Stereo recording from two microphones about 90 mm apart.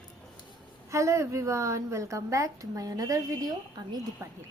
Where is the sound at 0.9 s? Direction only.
35° right (ahead or behind).